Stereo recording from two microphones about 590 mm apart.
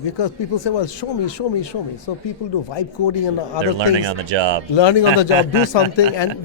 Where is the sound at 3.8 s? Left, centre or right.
Right.